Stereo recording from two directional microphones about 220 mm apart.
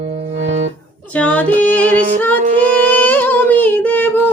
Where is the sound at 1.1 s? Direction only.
5° left (ahead or behind).